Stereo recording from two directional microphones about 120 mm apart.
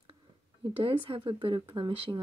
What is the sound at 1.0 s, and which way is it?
Speech, 50° right (ahead or behind).